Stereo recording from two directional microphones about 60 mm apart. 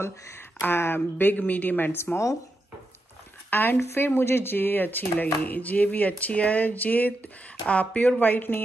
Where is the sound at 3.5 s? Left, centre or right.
Left.